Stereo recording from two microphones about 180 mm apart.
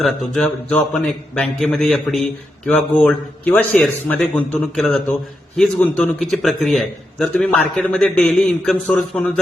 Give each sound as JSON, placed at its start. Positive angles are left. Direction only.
{"t": 0.0, "sound": "a man's voice", "side_deg": 5}